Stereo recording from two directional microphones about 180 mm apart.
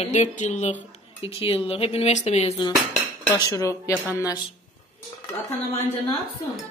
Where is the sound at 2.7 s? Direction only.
20° left (ahead or behind).